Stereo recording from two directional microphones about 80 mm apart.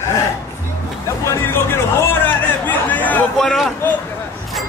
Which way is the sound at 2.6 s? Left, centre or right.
Left.